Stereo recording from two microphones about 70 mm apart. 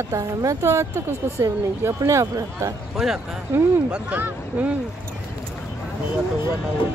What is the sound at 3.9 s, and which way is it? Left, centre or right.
Speech, right.